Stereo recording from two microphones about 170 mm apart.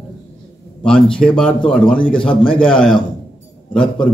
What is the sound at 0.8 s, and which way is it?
Speech, 5° left (ahead or behind).